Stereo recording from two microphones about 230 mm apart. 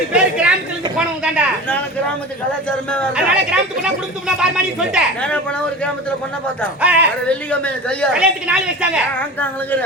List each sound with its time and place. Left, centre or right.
0.1 s chatter: centre
0.9 s a woman's voice: centre
2.6 s a woman's voice: centre
6.8 s speech: centre
7.3 s a woman's voice: centre